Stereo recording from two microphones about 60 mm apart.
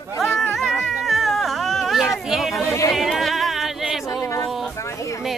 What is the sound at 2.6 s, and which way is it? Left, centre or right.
Speech, left.